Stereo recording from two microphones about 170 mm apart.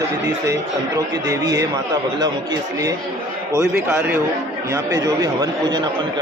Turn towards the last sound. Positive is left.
turn(degrees=-20)  # may be behind; listen again after turning